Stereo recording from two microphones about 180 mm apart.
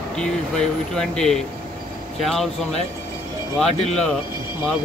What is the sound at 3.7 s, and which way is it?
Speech, 35° left (ahead or behind).